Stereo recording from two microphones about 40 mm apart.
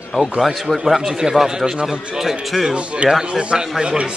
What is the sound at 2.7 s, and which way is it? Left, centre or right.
A man's voice, right.